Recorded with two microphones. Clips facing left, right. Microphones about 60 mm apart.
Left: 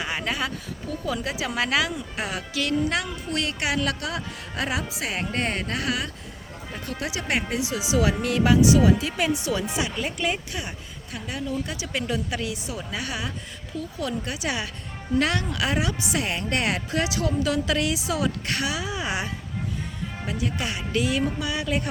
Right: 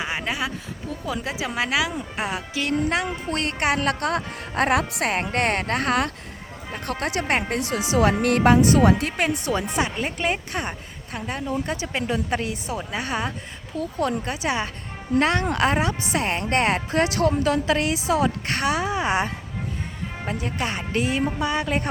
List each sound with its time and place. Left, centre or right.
0.0 s a sound: centre
1.0 s a woman's voice: right
1.9 s speech: right